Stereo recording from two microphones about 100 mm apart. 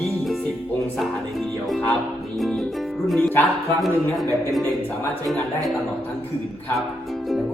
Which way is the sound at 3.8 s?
Centre (ahead or behind).